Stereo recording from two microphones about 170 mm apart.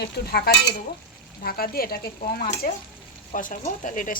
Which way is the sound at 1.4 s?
60° left (ahead or behind).